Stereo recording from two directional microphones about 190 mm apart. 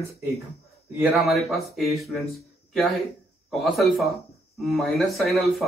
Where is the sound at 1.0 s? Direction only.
Centre (ahead or behind).